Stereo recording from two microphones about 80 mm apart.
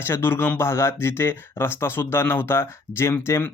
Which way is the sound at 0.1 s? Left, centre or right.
Left.